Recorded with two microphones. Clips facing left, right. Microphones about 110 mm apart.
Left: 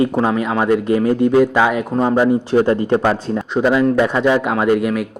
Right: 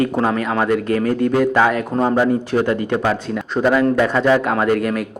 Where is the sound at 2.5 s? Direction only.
30° left (ahead or behind).